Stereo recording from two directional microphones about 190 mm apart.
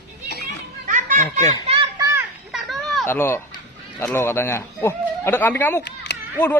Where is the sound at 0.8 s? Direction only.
45° right (ahead or behind).